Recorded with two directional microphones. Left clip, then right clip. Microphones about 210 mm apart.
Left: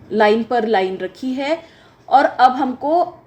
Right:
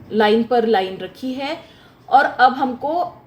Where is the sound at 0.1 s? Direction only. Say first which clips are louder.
Left 1 dB; 40° left (ahead or behind).